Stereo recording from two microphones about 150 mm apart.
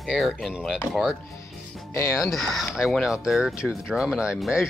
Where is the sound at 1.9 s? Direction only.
20° left (ahead or behind).